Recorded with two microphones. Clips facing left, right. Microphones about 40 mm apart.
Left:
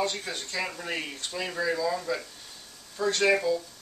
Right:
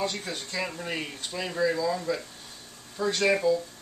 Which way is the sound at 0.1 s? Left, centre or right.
Centre.